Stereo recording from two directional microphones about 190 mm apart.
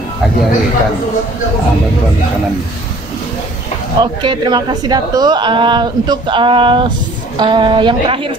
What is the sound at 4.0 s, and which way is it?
A woman's voice, 25° right (ahead or behind).